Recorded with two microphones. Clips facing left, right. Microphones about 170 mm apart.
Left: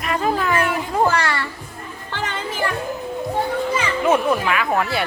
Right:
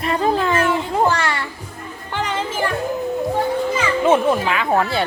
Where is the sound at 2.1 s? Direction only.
20° right (ahead or behind).